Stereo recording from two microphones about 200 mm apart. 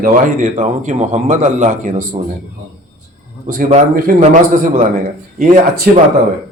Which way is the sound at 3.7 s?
40° right (ahead or behind).